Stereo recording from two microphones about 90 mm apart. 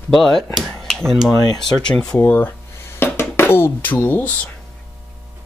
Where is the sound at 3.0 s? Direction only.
25° left (ahead or behind).